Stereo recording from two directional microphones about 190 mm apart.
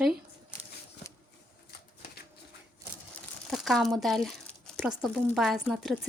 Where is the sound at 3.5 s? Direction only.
Centre (ahead or behind).